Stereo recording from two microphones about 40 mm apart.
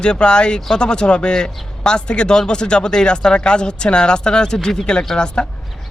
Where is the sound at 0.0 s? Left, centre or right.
Left.